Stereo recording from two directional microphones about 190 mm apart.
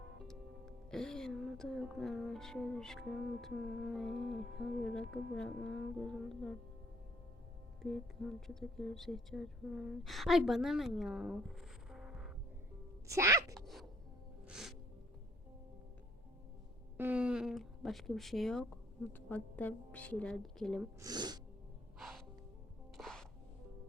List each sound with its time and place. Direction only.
0.2 s speech: 5° left (ahead or behind)
8.4 s speech: centre (ahead or behind)
11.9 s music: 5° right (ahead or behind)
13.1 s speech: 15° right (ahead or behind)
13.5 s music: centre (ahead or behind)
17.0 s speech: 5° right (ahead or behind)
21.0 s speech: 20° right (ahead or behind)
21.9 s music: centre (ahead or behind)